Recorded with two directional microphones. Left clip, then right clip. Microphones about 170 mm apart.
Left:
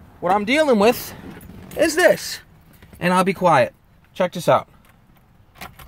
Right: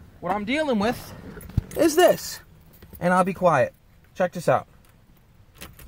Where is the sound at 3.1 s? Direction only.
5° left (ahead or behind).